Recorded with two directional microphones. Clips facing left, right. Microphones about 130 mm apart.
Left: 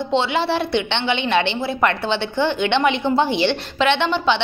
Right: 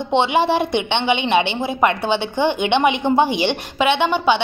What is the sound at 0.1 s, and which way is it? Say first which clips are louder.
A woman's voice: right 4 dB; 15° right (ahead or behind).